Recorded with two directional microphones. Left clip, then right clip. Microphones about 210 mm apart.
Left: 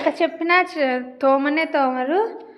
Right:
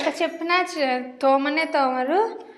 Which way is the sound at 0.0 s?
20° left (ahead or behind).